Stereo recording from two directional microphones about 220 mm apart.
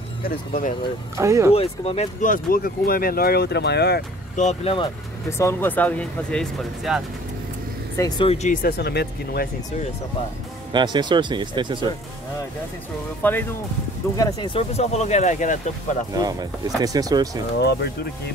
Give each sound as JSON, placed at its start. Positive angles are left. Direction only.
{"t": 0.2, "sound": "speech", "side_deg": 40}
{"t": 1.1, "sound": "speech", "side_deg": -15}
{"t": 1.5, "sound": "speech", "side_deg": 25}
{"t": 4.4, "sound": "speech", "side_deg": 30}
{"t": 5.4, "sound": "speech", "side_deg": 10}
{"t": 8.0, "sound": "speech", "side_deg": 25}
{"t": 8.6, "sound": "speech", "side_deg": 45}
{"t": 10.7, "sound": "speech", "side_deg": -20}
{"t": 13.2, "sound": "speech", "side_deg": 10}
{"t": 16.2, "sound": "speech", "side_deg": -15}
{"t": 17.6, "sound": "speech", "side_deg": 45}